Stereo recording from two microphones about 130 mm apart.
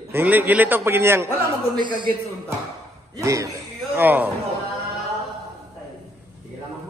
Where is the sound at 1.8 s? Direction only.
35° right (ahead or behind).